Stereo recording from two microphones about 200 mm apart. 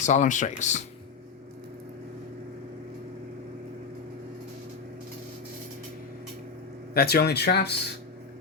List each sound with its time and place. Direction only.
0.0 s speech: 35° left (ahead or behind)
6.9 s speech: 50° left (ahead or behind)